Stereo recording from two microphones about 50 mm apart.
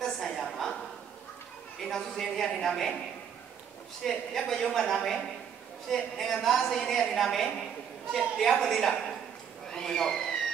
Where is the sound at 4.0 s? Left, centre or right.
Centre.